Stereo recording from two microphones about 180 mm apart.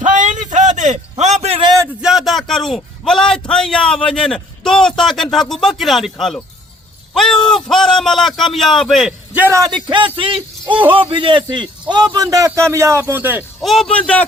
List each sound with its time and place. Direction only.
0.0 s a sound: 45° right (ahead or behind)
2.0 s a man's voice: centre (ahead or behind)
9.3 s a man's voice: 15° right (ahead or behind)
13.6 s a man's voice: centre (ahead or behind)